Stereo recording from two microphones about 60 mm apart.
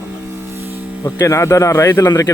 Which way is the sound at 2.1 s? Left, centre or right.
Left.